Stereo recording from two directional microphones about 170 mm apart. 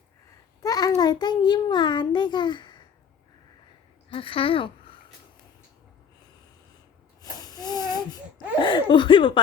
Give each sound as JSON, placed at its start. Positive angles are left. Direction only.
{"t": 0.6, "sound": "a child's voice", "side_deg": 20}
{"t": 4.1, "sound": "speech", "side_deg": 30}
{"t": 7.2, "sound": "a sound", "side_deg": 20}
{"t": 8.5, "sound": "speech", "side_deg": 30}